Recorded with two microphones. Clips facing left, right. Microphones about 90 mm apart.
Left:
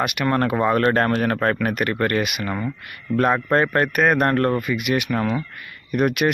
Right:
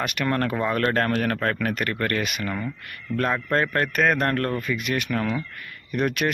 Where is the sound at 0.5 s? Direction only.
25° left (ahead or behind).